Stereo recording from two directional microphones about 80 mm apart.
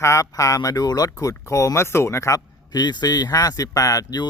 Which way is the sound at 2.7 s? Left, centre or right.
Left.